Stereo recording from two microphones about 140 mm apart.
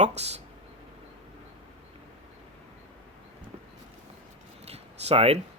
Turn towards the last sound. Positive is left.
turn(degrees=-45)  # may be behind; listen again after turning